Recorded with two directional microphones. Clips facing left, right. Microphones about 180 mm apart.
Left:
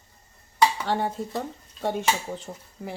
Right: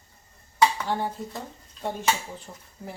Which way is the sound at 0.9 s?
75° left (ahead or behind).